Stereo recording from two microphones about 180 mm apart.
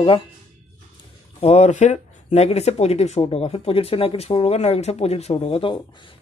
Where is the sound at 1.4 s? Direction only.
35° left (ahead or behind).